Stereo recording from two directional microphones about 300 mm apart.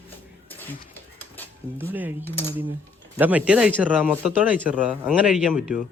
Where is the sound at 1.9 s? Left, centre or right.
Centre.